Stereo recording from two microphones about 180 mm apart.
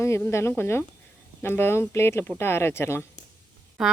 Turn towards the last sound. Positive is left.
turn(degrees=0)  # may be behind; listen again after turning